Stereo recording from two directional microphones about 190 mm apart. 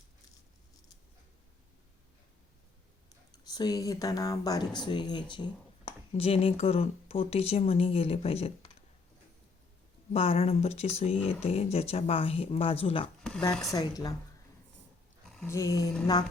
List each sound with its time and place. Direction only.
3.3 s speech: 20° left (ahead or behind)
10.1 s speech: 30° left (ahead or behind)
15.4 s speech: 15° left (ahead or behind)